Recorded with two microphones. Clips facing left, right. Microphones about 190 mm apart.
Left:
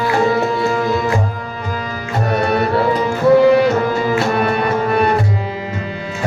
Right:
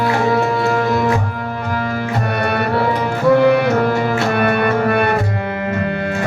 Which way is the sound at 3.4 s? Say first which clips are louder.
Left 1 dB; 60° right (ahead or behind).